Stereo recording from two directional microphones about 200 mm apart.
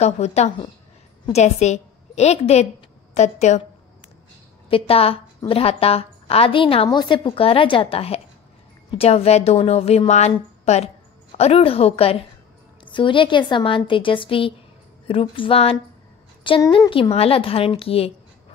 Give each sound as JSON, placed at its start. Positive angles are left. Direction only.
{"t": 0.0, "sound": "a woman's voice", "side_deg": 35}
{"t": 4.6, "sound": "a woman's voice", "side_deg": 30}